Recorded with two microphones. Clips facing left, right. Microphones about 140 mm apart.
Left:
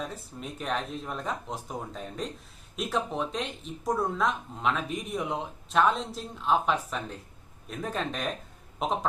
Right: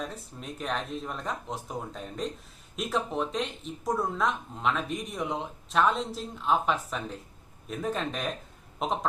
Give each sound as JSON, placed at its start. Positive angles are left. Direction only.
{"t": 0.0, "sound": "speech", "side_deg": 0}